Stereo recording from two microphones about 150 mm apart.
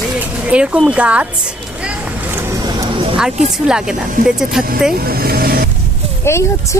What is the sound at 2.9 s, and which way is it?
Music, 35° right (ahead or behind).